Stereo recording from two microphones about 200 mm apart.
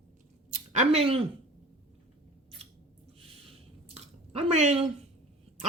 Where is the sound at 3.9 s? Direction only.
30° right (ahead or behind).